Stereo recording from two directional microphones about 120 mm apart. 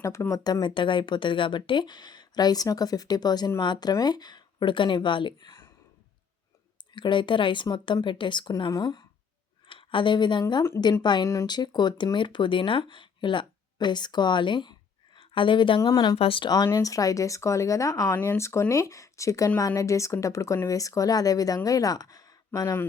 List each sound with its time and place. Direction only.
0.0 s speech: 25° left (ahead or behind)
6.9 s speech: 40° left (ahead or behind)
9.6 s speech: 45° left (ahead or behind)
15.8 s speech: 35° left (ahead or behind)
16.1 s speech: 50° left (ahead or behind)
16.6 s speech: 25° left (ahead or behind)